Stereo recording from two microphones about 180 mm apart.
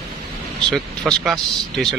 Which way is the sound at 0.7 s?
5° left (ahead or behind).